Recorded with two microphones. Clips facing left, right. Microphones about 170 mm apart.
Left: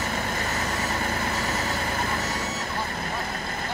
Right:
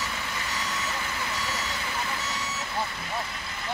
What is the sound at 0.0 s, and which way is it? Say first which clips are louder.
Vehicle: left 6 dB; 45° left (ahead or behind).